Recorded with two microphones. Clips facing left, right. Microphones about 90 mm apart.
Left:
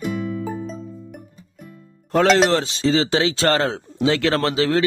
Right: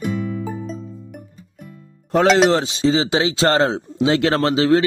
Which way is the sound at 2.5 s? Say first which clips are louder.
Right 1 dB; 20° right (ahead or behind).